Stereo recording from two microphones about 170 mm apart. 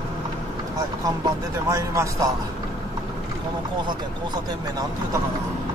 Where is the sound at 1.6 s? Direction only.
15° right (ahead or behind).